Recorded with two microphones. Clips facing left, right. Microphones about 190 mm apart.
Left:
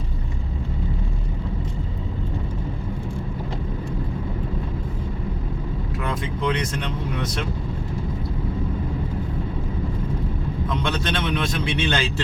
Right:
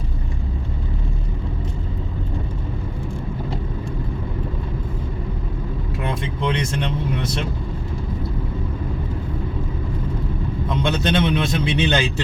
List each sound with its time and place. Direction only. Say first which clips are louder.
6.0 s vehicle: right 1 dB; 25° right (ahead or behind)
10.7 s a man's voice: right 5 dB; 25° right (ahead or behind)